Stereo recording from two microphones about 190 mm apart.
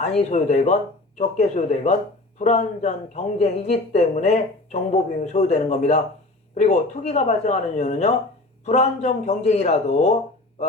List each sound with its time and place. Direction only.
0.2 s a woman's voice: 35° left (ahead or behind)